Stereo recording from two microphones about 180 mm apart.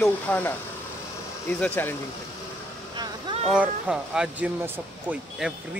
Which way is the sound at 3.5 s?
5° right (ahead or behind).